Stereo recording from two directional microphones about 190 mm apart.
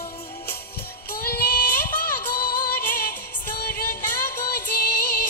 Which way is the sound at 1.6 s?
10° left (ahead or behind).